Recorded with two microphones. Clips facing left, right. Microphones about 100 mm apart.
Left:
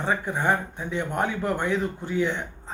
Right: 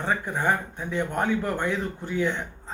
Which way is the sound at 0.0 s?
15° left (ahead or behind).